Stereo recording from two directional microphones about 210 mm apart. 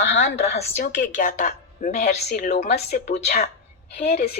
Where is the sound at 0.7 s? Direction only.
40° left (ahead or behind).